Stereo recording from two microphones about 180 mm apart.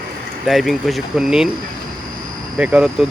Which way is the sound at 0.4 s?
Centre (ahead or behind).